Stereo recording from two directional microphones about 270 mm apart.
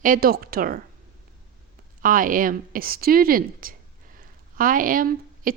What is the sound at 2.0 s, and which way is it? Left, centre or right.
Speech, right.